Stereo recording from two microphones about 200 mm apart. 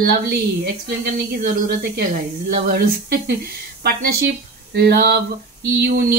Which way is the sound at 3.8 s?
55° right (ahead or behind).